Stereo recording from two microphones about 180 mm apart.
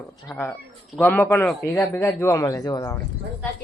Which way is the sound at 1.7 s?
15° left (ahead or behind).